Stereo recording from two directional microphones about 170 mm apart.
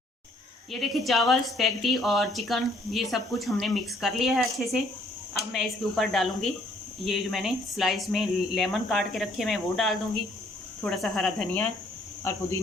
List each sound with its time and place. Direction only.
0.7 s a woman's voice: centre (ahead or behind)
12.2 s speech: 15° left (ahead or behind)